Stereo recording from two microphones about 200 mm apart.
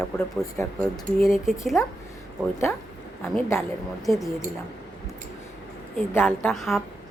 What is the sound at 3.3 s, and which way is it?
Speech, 15° left (ahead or behind).